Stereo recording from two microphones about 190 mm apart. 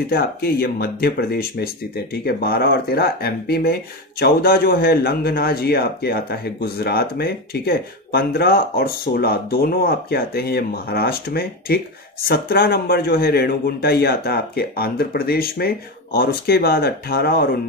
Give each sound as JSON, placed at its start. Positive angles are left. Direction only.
{"t": 0.1, "sound": "speech", "side_deg": 55}